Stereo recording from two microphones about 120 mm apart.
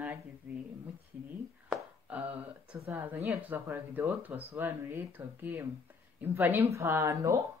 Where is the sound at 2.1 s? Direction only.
15° right (ahead or behind).